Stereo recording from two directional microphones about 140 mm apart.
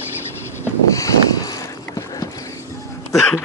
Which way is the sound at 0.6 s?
25° left (ahead or behind).